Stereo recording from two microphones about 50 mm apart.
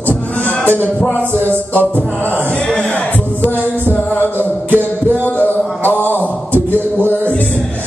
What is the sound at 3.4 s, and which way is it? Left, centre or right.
Music, left.